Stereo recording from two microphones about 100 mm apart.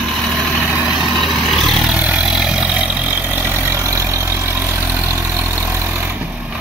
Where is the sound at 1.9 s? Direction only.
10° right (ahead or behind).